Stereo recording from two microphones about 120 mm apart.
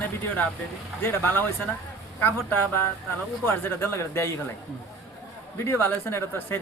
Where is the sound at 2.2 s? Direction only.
20° left (ahead or behind).